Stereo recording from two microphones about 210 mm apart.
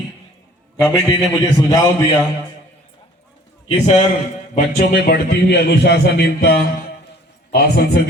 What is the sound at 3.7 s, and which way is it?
Speech, 30° left (ahead or behind).